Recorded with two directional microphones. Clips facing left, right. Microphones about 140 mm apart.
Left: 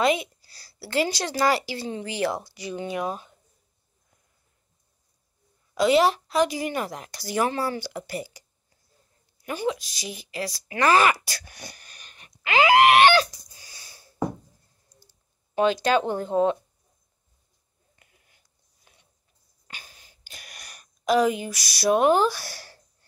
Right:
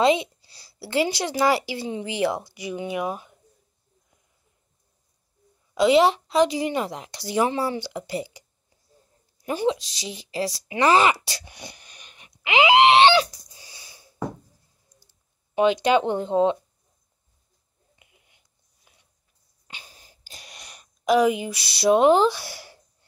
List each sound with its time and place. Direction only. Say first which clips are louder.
0.0 s a woman's voice: right 3 dB; 25° right (ahead or behind)
5.8 s speech: right 2 dB; 20° right (ahead or behind)
13.6 s a sound: right 3 dB; 20° right (ahead or behind)
15.5 s speech: right 2 dB; 20° right (ahead or behind)
17.9 s finger snapping: right 1 dB; 15° right (ahead or behind)
18.9 s a sound: left 1 dB; 5° right (ahead or behind)
20.0 s wheeze: right 1 dB; 35° right (ahead or behind)
20.4 s a sound: right 1 dB; 25° right (ahead or behind)
21.7 s speech: right 3 dB; 20° right (ahead or behind)